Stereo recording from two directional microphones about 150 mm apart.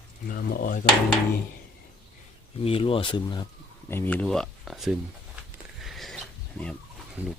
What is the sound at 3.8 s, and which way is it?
Speech, 15° left (ahead or behind).